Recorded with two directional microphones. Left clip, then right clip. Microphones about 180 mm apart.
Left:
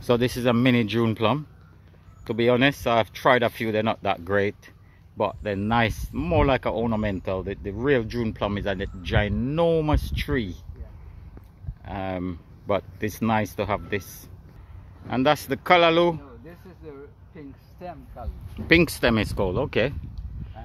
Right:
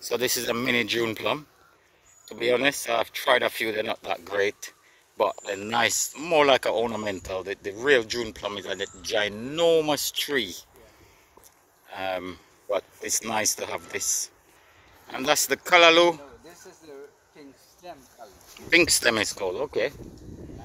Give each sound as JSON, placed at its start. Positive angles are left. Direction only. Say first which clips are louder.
{"t": 0.0, "sound": "speech", "louder": "left 4 dB", "side_deg": -5}
{"t": 12.0, "sound": "speech", "louder": "right 1 dB", "side_deg": -10}
{"t": 16.8, "sound": "a sound", "louder": "left 3 dB", "side_deg": -60}
{"t": 18.7, "sound": "speech", "louder": "even", "side_deg": -10}
{"t": 19.3, "sound": "speech", "louder": "left 3 dB", "side_deg": 5}